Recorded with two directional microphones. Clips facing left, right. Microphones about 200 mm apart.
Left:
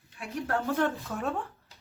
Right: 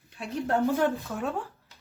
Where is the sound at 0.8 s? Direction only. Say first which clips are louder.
Right 2 dB; centre (ahead or behind).